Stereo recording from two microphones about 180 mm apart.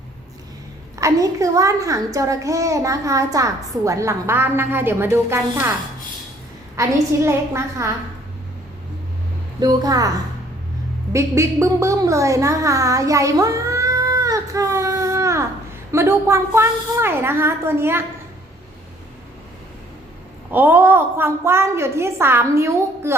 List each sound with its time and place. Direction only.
0.9 s a woman's voice: 15° right (ahead or behind)
6.7 s a woman's voice: 15° right (ahead or behind)
9.6 s a woman's voice: 20° right (ahead or behind)
11.1 s a woman's voice: 15° right (ahead or behind)
20.5 s a woman's voice: 10° right (ahead or behind)